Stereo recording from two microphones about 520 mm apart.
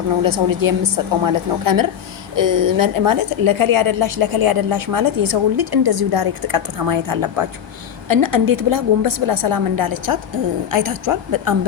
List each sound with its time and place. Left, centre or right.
0.2 s a woman's voice: right